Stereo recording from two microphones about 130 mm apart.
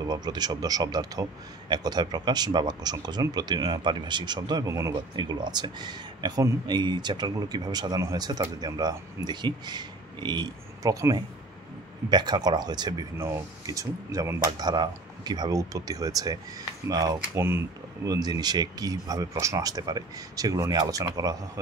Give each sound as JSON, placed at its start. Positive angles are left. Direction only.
{"t": 0.0, "sound": "speech", "side_deg": -30}
{"t": 5.1, "sound": "speech", "side_deg": -35}
{"t": 17.2, "sound": "speech", "side_deg": -20}